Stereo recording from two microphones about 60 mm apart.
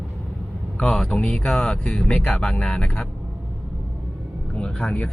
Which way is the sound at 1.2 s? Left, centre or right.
Centre.